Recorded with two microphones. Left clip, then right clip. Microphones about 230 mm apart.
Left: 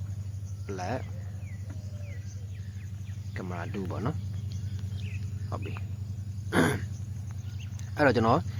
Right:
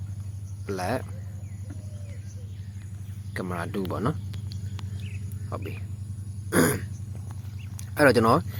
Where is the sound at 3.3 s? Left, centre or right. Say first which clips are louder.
Right 6 dB; centre.